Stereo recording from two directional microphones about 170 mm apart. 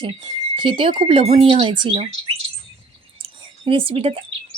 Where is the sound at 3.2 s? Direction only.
30° right (ahead or behind).